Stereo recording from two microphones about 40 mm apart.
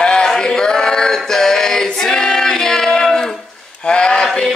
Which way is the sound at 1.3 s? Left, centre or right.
Centre.